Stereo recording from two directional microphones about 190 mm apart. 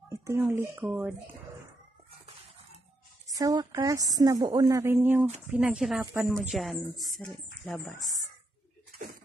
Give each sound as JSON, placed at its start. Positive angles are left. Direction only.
{"t": 0.1, "sound": "a woman's voice", "side_deg": -15}
{"t": 3.3, "sound": "a woman's voice", "side_deg": -20}